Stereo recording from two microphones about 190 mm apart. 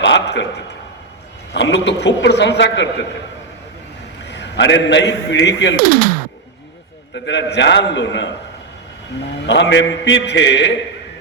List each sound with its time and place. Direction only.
0.0 s a man's voice: 65° left (ahead or behind)
1.5 s a man's voice: 65° left (ahead or behind)
4.3 s a man's voice: 65° left (ahead or behind)
5.8 s speech: 50° right (ahead or behind)
7.3 s a man's voice: 65° left (ahead or behind)
9.5 s a man's voice: 70° left (ahead or behind)